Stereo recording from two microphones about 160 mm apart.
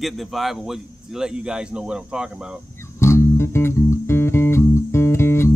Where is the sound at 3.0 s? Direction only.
15° left (ahead or behind).